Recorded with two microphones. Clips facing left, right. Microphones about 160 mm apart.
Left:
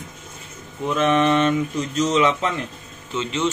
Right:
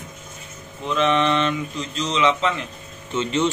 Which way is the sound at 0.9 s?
50° left (ahead or behind).